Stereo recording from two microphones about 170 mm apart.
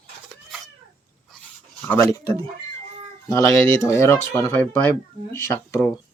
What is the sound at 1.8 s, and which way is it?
Speech, 15° left (ahead or behind).